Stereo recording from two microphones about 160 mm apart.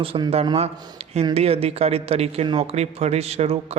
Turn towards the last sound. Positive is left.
turn(degrees=-40)  # may be behind; listen again after turning